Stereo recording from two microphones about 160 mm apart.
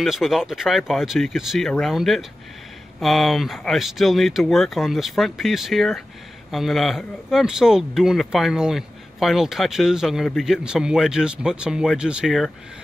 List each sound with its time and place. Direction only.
0.0 s speech: centre (ahead or behind)